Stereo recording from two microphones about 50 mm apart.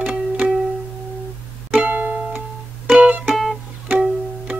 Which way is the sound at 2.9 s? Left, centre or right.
Right.